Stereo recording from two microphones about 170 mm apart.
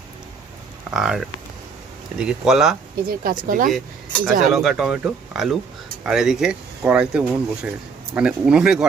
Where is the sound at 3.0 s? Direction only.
55° right (ahead or behind).